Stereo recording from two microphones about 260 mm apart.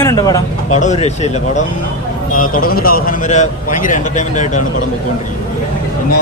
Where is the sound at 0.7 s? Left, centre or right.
Left.